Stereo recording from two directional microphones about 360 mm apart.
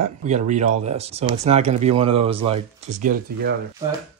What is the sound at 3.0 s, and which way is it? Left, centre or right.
Speech, right.